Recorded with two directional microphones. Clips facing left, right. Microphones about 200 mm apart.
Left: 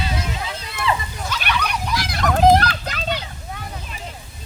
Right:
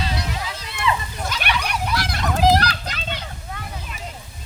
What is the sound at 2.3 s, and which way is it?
Children playing, 50° left (ahead or behind).